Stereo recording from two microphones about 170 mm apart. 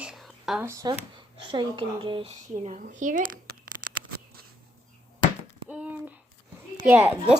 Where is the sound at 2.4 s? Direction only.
45° right (ahead or behind).